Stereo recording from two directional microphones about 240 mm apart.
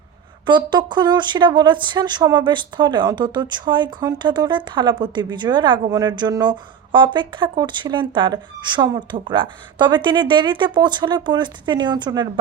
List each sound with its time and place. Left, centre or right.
0.4 s speech: centre